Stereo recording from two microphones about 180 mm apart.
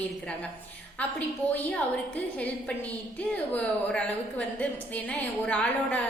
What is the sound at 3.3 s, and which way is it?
A woman's voice, 5° left (ahead or behind).